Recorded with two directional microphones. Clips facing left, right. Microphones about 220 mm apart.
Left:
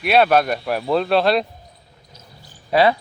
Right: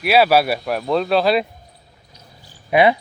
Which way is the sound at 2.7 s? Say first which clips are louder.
Right 1 dB; 20° right (ahead or behind).